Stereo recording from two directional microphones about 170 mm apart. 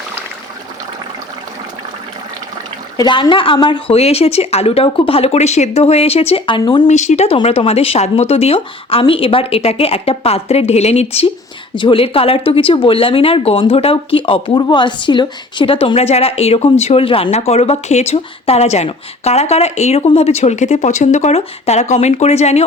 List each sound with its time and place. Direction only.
3.0 s a woman's voice: 30° left (ahead or behind)
6.8 s speech: 45° left (ahead or behind)